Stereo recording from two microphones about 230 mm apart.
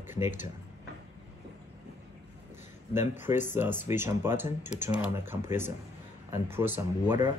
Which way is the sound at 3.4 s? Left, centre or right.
Centre.